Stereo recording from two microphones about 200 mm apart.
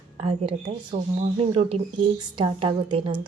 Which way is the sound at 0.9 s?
30° right (ahead or behind).